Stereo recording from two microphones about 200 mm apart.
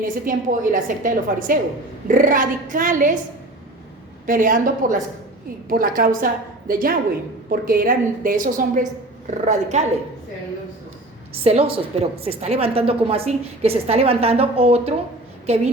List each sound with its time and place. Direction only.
0.0 s a woman's voice: 40° right (ahead or behind)
4.3 s a woman's voice: 40° right (ahead or behind)
11.4 s a woman's voice: 30° right (ahead or behind)